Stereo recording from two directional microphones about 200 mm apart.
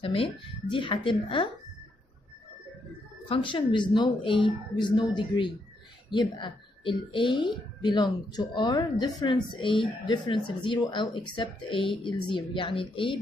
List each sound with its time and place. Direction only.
0.0 s speech: 25° left (ahead or behind)
3.3 s speech: 25° left (ahead or behind)